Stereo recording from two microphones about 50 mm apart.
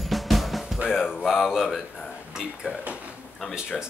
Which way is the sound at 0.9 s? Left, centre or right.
Centre.